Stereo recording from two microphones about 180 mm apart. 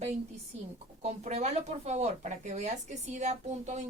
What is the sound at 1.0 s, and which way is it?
Speech, 40° right (ahead or behind).